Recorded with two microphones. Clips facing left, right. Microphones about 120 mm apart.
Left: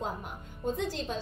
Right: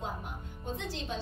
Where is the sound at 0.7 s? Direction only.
45° left (ahead or behind).